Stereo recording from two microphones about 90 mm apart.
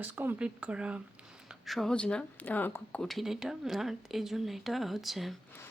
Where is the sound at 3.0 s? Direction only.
Centre (ahead or behind).